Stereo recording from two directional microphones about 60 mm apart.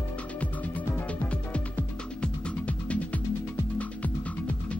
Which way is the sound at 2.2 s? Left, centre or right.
Left.